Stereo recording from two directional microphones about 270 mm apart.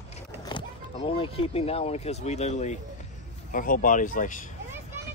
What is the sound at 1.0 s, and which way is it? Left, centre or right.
Speech, centre.